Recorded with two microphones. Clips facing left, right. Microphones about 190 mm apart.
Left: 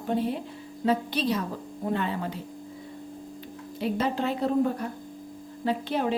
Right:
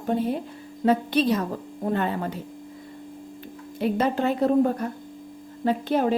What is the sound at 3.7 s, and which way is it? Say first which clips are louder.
A woman's voice: right 4 dB; 55° right (ahead or behind).